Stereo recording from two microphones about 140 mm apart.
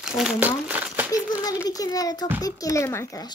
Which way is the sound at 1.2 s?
10° right (ahead or behind).